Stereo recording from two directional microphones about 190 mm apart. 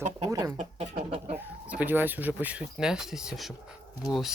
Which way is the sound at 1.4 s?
10° right (ahead or behind).